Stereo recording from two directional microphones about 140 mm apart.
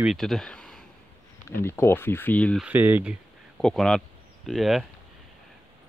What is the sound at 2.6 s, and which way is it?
Speech, 10° right (ahead or behind).